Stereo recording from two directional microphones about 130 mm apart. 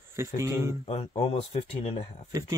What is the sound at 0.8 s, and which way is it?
Speech, 50° left (ahead or behind).